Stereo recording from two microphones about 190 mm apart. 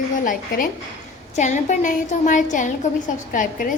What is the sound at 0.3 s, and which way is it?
A woman's voice, 45° left (ahead or behind).